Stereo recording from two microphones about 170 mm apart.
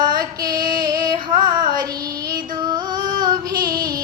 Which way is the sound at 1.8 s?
20° right (ahead or behind).